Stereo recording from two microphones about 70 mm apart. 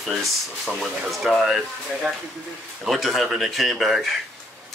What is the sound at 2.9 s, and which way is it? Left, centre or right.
Speech, centre.